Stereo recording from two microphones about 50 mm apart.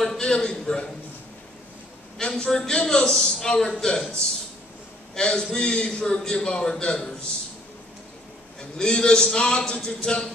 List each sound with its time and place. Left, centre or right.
0.2 s a man's voice: centre
2.1 s a man's voice: centre
5.1 s a man's voice: centre
8.5 s a man's voice: centre